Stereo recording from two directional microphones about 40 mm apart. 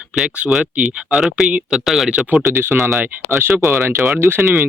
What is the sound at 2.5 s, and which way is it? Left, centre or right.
Speech, right.